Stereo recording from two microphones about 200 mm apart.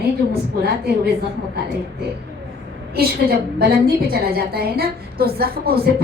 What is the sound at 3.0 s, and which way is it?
Speech, 50° right (ahead or behind).